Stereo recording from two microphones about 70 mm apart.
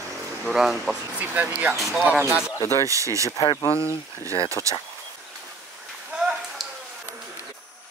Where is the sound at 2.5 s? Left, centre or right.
Left.